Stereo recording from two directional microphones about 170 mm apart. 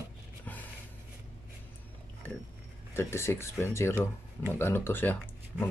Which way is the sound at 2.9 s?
15° left (ahead or behind).